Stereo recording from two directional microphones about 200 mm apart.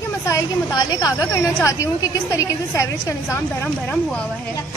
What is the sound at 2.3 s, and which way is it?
A woman's voice, 15° left (ahead or behind).